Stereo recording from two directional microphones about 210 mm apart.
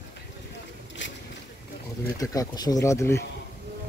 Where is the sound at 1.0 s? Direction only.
60° left (ahead or behind).